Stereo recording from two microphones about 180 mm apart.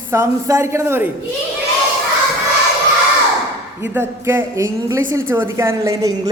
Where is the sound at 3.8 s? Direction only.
15° right (ahead or behind).